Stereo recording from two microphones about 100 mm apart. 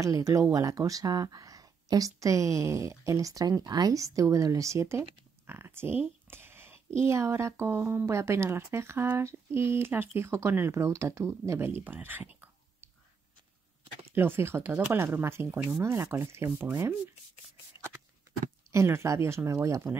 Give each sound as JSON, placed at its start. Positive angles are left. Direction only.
{"t": 0.0, "sound": "speech", "side_deg": -35}
{"t": 14.1, "sound": "speech", "side_deg": -20}
{"t": 18.7, "sound": "speech", "side_deg": -30}